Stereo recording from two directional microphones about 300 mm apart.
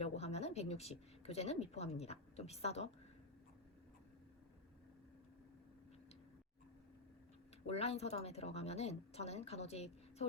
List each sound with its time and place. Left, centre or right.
0.0 s speech: left
7.7 s speech: left